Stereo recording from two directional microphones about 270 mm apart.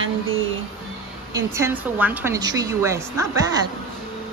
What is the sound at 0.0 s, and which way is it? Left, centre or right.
Music, right.